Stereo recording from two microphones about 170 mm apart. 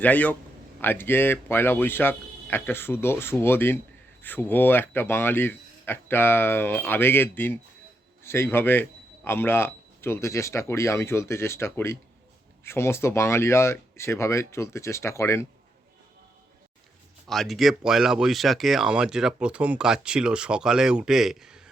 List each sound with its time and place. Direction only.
0.0 s speech: 10° left (ahead or behind)
17.2 s speech: centre (ahead or behind)